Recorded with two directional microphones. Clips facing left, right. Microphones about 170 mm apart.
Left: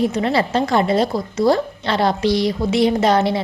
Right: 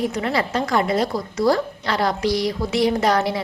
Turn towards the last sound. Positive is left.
turn(degrees=25)  # may be behind; listen again after turning